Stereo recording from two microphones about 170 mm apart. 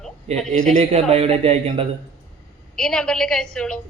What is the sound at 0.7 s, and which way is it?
Speech, 40° right (ahead or behind).